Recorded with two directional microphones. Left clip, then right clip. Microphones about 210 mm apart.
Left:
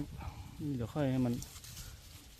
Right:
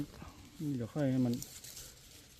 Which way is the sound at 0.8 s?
30° left (ahead or behind).